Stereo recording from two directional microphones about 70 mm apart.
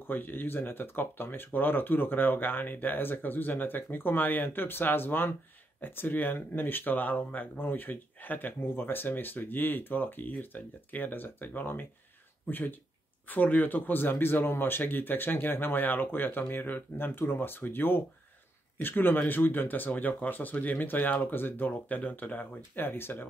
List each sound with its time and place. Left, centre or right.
0.0 s speech: left